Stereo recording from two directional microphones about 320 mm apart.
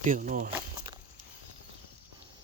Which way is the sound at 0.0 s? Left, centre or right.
Right.